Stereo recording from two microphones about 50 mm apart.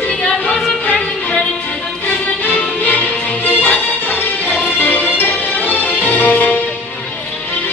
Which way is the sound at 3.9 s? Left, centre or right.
Left.